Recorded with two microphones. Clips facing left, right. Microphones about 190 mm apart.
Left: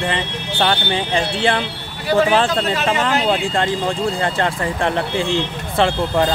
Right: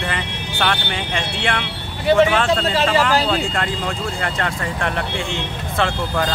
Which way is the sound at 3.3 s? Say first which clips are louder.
Left 3 dB; 30° left (ahead or behind).